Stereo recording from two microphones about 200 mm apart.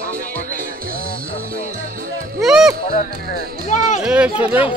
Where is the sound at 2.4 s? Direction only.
5° right (ahead or behind).